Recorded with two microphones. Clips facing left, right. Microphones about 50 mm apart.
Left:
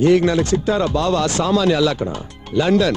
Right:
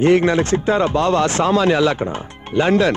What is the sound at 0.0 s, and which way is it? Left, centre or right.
A man's voice, right.